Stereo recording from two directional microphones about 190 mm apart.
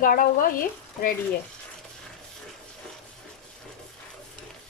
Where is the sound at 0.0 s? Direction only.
45° left (ahead or behind).